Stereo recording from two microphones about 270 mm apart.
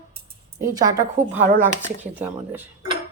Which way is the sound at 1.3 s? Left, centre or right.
Right.